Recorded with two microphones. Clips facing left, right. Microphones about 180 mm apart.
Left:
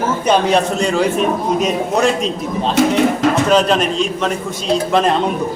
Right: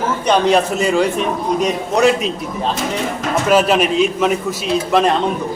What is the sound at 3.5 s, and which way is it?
Speech, 5° right (ahead or behind).